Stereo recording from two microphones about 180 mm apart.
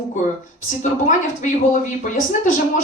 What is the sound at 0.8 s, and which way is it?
Speech, 45° left (ahead or behind).